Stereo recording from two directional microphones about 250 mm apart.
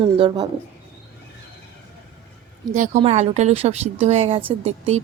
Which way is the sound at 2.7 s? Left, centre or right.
Right.